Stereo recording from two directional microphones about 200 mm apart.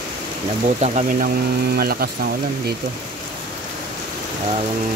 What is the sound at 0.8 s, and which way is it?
Speech, 40° right (ahead or behind).